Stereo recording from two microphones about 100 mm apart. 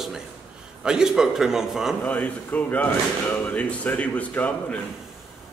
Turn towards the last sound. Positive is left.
turn(degrees=15)  # may be behind; listen again after turning